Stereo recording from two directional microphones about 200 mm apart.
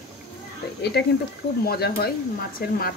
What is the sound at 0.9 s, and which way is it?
Speech, 50° left (ahead or behind).